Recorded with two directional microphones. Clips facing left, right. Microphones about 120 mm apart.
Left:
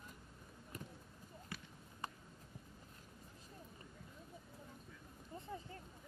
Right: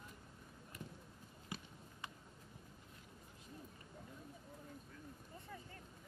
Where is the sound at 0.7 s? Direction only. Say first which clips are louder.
Left 1 dB; 40° left (ahead or behind).